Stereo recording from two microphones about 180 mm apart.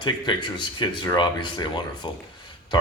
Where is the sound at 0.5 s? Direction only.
25° left (ahead or behind).